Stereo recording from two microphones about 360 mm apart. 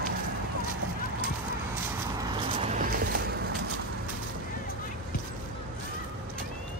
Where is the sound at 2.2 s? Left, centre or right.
Centre.